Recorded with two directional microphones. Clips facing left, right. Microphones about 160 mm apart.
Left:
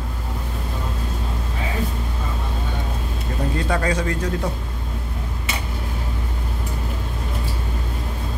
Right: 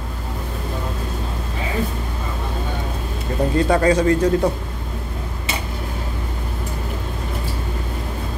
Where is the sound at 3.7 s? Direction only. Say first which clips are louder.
Right 8 dB; 35° right (ahead or behind).